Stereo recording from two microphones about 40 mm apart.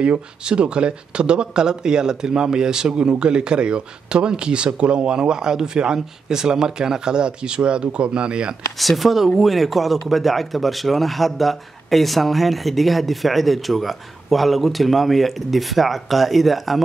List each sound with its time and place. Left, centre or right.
0.0 s speech: right
8.7 s a man's voice: centre